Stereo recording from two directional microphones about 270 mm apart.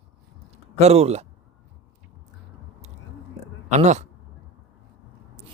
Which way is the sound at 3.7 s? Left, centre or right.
Right.